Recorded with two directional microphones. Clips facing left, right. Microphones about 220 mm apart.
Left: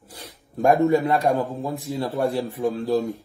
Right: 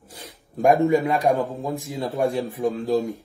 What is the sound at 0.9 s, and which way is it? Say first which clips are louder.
Speech: even; 15° right (ahead or behind).